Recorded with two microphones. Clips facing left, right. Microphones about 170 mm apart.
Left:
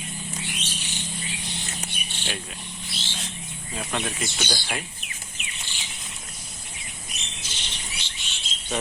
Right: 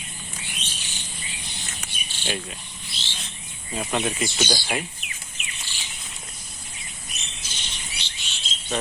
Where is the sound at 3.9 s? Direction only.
5° right (ahead or behind).